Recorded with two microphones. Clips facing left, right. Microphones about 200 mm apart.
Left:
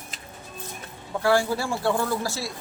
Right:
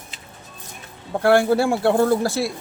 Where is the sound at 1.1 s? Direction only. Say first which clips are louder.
Right 6 dB; 60° right (ahead or behind).